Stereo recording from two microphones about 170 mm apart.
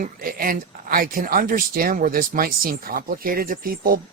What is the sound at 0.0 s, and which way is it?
Speech, 55° right (ahead or behind).